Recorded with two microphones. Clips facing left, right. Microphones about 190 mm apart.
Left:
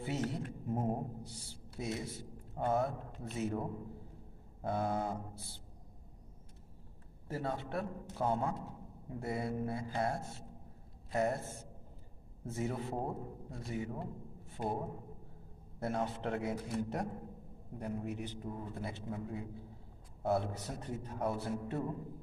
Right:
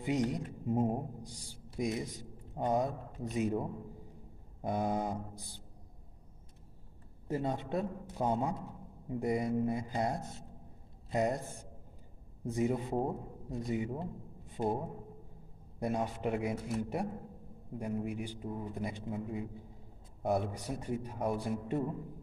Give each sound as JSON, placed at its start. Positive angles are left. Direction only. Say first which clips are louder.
{"t": 0.0, "sound": "a woman's voice", "louder": "right 5 dB", "side_deg": -15}
{"t": 7.2, "sound": "a man's voice", "louder": "right 4 dB", "side_deg": -20}
{"t": 15.8, "sound": "speech", "louder": "right 2 dB", "side_deg": -15}